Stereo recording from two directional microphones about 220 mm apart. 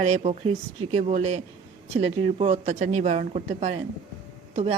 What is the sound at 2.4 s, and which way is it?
Speech, 30° right (ahead or behind).